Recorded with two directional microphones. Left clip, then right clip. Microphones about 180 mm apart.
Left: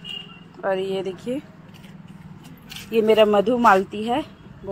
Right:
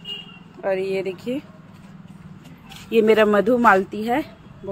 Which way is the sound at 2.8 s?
30° right (ahead or behind).